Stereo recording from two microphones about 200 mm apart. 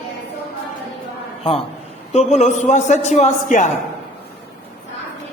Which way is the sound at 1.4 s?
25° left (ahead or behind).